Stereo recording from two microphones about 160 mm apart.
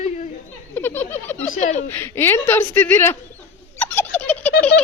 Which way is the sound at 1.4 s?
50° left (ahead or behind).